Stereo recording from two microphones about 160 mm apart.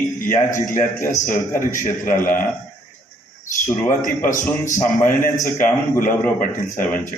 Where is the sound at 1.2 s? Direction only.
55° left (ahead or behind).